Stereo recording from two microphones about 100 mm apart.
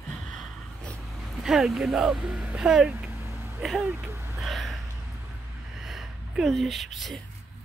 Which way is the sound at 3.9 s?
25° right (ahead or behind).